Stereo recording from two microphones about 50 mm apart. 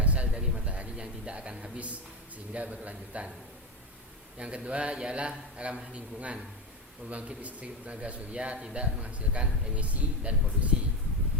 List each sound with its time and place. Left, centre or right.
0.0 s a sound: right
2.5 s a man's voice: right
4.4 s a man's voice: right